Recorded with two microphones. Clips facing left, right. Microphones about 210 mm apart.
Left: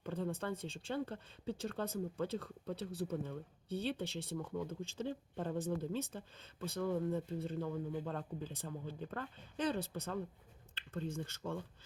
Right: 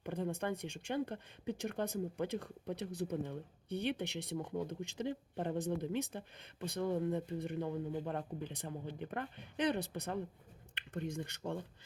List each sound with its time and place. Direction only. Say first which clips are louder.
0.0 s speech: right 2 dB; 15° right (ahead or behind)